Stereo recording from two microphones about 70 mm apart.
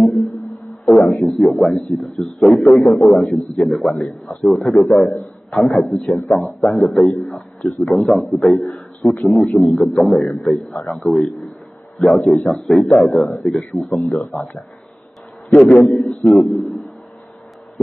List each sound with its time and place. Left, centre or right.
0.0 s a man's voice: centre
6.0 s a man's voice: centre
6.4 s a man's voice: centre
16.1 s a man's voice: centre